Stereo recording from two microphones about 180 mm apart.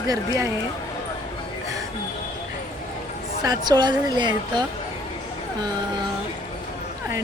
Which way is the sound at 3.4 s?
20° right (ahead or behind).